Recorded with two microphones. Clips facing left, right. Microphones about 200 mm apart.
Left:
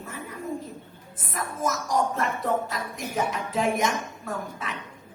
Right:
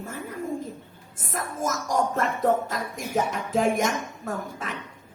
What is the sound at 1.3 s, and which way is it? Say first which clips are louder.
Music: even; 45° right (ahead or behind).